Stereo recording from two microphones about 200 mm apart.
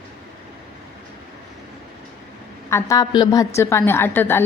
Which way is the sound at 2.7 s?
15° left (ahead or behind).